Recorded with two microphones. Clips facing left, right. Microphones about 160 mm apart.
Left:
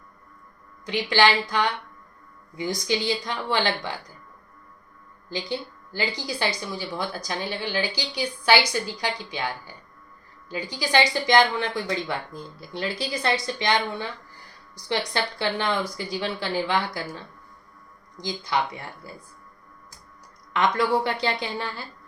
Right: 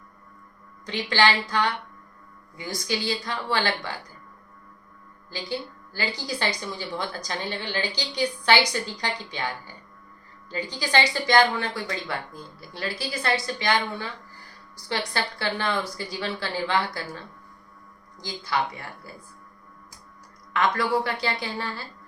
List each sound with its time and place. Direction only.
0.9 s a woman's voice: 10° left (ahead or behind)
5.3 s a woman's voice: 20° left (ahead or behind)
14.8 s a woman's voice: 20° left (ahead or behind)
18.2 s a woman's voice: 20° left (ahead or behind)
20.5 s speech: 20° left (ahead or behind)